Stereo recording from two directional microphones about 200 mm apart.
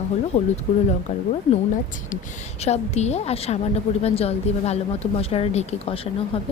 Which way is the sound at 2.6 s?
35° left (ahead or behind).